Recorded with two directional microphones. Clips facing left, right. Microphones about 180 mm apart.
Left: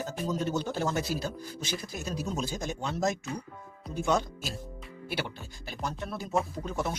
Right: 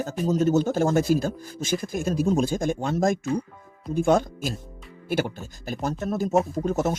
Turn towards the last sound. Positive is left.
turn(degrees=-45)  # may be behind; listen again after turning